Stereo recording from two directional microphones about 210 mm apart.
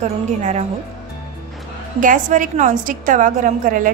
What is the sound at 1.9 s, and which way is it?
A woman's voice, 40° right (ahead or behind).